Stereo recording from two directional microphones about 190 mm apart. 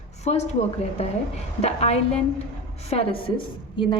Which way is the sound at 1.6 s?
35° left (ahead or behind).